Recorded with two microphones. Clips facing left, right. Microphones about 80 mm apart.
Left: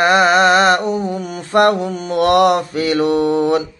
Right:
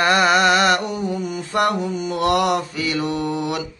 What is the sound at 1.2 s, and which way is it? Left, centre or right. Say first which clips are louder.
Mantra: left 7 dB; left.